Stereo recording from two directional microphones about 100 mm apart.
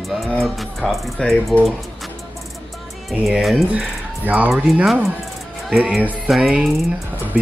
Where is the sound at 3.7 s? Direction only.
15° right (ahead or behind).